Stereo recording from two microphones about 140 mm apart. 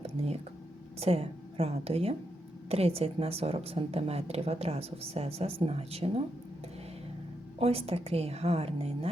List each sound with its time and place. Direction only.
0.2 s a sound: 45° right (ahead or behind)
0.9 s a woman's voice: 45° right (ahead or behind)
7.6 s speech: 45° right (ahead or behind)